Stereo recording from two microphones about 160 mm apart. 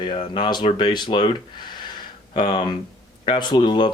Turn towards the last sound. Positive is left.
turn(degrees=30)  # may be behind; listen again after turning